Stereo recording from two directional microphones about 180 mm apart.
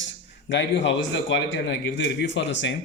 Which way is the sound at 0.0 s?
90° left.